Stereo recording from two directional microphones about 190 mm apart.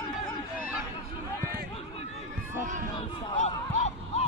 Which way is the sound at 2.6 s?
40° right (ahead or behind).